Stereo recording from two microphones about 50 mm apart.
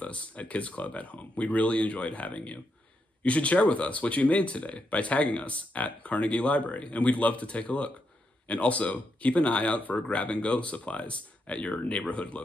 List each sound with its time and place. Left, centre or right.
0.0 s speech: left